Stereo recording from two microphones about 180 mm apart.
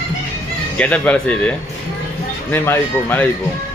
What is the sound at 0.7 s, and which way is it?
Speech, 5° left (ahead or behind).